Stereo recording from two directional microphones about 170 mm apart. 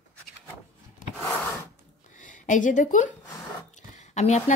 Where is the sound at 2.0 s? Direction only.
50° left (ahead or behind).